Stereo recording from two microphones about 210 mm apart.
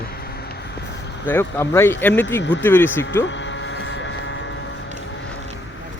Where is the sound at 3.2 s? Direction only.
60° left (ahead or behind).